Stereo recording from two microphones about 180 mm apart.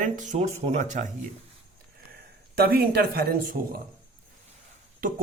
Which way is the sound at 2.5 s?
55° right (ahead or behind).